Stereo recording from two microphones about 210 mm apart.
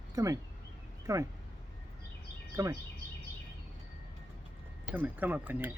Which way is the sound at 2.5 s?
15° right (ahead or behind).